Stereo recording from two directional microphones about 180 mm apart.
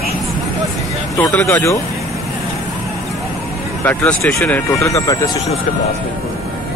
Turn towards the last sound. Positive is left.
turn(degrees=20)  # may be behind; listen again after turning